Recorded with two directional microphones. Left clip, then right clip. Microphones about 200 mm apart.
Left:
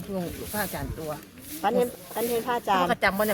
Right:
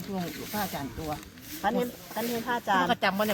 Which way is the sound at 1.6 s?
45° left (ahead or behind).